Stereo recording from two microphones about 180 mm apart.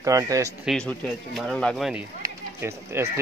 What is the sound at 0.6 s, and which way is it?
Speech, centre (ahead or behind).